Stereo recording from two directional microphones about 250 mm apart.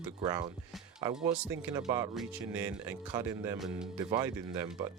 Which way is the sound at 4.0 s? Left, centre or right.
Centre.